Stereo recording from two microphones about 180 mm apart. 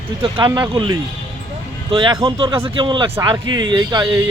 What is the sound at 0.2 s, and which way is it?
Speech, 25° right (ahead or behind).